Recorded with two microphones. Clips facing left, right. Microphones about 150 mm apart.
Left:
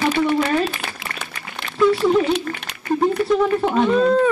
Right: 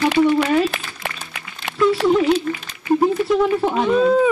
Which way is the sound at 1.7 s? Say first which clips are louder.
Right 1 dB; 90° right.